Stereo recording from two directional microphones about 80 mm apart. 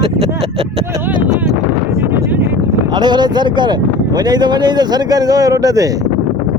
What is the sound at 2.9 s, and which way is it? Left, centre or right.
Speech, right.